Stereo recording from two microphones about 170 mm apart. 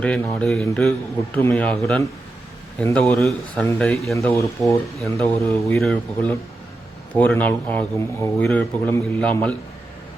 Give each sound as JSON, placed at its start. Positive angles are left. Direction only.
{"t": 0.0, "sound": "a man's voice", "side_deg": 5}